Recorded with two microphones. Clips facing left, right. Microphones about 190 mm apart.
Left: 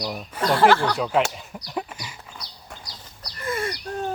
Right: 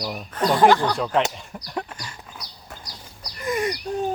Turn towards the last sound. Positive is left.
turn(degrees=-15)  # may be behind; listen again after turning